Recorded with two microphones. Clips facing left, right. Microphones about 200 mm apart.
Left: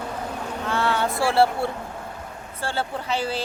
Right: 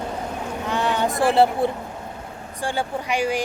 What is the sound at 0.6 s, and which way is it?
Speech, 15° right (ahead or behind).